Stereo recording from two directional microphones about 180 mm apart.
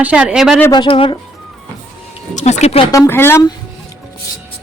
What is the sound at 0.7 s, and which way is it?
Speech, 25° left (ahead or behind).